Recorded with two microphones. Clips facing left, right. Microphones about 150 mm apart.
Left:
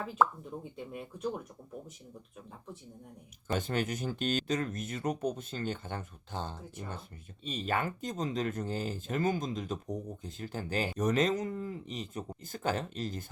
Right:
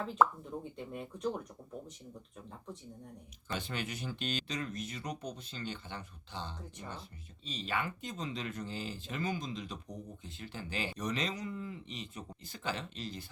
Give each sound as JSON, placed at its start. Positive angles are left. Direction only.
{"t": 0.0, "sound": "speech", "side_deg": 5}
{"t": 3.5, "sound": "speech", "side_deg": 45}